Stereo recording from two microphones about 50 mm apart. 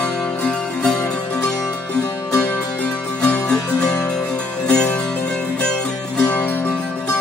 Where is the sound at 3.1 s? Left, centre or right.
Centre.